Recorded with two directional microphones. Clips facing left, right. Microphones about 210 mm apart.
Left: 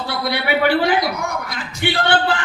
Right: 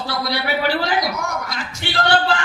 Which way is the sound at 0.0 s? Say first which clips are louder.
Left 1 dB; 55° left (ahead or behind).